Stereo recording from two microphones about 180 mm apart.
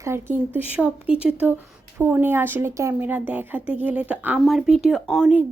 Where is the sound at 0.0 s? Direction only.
15° right (ahead or behind).